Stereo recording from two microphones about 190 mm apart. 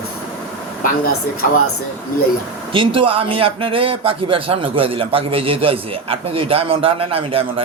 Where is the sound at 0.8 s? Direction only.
50° left (ahead or behind).